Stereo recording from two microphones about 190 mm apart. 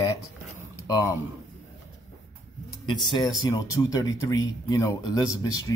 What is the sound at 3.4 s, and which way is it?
Speech, 20° left (ahead or behind).